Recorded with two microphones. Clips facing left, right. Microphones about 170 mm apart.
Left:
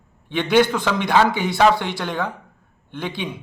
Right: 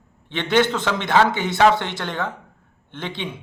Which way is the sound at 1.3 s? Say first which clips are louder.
Even; 20° right (ahead or behind).